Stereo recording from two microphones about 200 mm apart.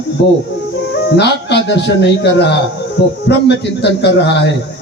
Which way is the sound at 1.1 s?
55° left (ahead or behind).